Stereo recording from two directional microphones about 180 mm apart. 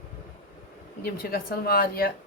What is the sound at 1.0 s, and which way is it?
A woman's voice, 60° left (ahead or behind).